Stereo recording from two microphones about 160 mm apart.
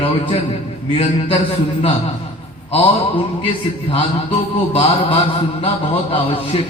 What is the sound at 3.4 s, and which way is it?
A man's voice, 35° left (ahead or behind).